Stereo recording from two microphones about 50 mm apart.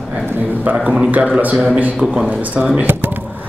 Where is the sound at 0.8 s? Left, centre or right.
Centre.